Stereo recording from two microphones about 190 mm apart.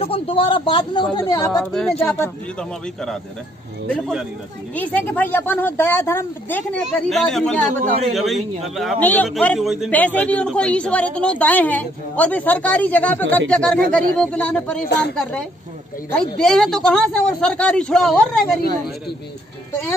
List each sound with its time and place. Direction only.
0.0 s a man's voice: 30° left (ahead or behind)
1.6 s speech: centre (ahead or behind)
3.9 s speech: centre (ahead or behind)
4.7 s a woman's voice: 10° left (ahead or behind)
14.9 s a woman's voice: 65° left (ahead or behind)
16.1 s speech: 5° left (ahead or behind)